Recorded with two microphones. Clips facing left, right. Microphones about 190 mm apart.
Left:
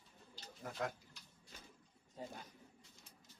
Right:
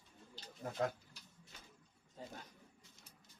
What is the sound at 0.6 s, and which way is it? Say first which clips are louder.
Speech: right 4 dB; 30° right (ahead or behind).